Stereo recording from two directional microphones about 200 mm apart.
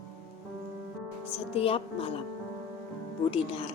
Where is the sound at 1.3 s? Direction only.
25° left (ahead or behind).